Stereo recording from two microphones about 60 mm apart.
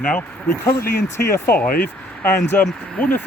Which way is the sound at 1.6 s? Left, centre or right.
Left.